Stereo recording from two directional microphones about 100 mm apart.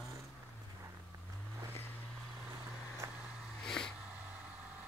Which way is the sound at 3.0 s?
30° right (ahead or behind).